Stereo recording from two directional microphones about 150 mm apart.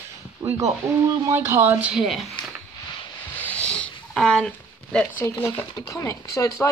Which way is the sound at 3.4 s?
10° left (ahead or behind).